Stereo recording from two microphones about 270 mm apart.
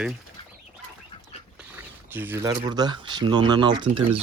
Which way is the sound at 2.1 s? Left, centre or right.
Centre.